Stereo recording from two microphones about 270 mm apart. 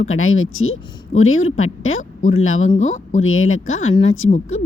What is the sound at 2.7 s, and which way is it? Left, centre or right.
Speech, left.